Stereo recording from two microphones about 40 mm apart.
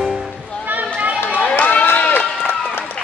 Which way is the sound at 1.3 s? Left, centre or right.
Left.